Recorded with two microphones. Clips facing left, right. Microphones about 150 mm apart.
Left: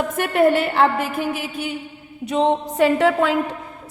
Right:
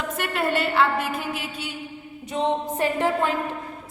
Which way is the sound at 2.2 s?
80° left.